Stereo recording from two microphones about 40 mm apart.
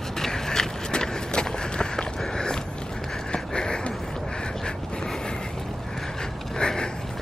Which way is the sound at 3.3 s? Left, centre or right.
Left.